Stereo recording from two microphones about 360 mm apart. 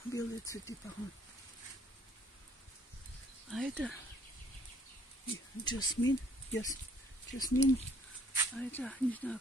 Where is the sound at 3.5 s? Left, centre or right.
Centre.